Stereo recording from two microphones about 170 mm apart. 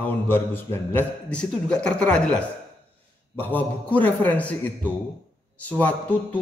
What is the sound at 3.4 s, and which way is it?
A man's voice, 10° left (ahead or behind).